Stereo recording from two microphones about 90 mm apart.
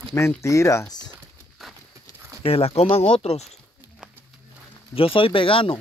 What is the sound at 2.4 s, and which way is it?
Speech, 90° left.